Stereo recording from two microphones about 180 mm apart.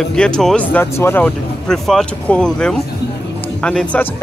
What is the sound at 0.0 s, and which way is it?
Speech, 5° left (ahead or behind).